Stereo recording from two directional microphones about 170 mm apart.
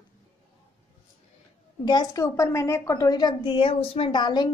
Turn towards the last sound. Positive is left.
turn(degrees=25)  # may be behind; listen again after turning